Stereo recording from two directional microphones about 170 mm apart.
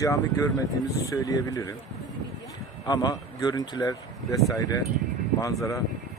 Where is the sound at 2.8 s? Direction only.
25° left (ahead or behind).